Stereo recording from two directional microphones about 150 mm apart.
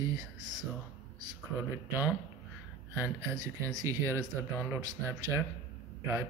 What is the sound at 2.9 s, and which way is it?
Speech, 20° right (ahead or behind).